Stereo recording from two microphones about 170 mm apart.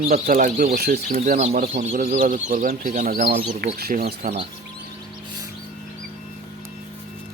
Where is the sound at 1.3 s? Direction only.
40° right (ahead or behind); by 4.2 s 65° right (ahead or behind).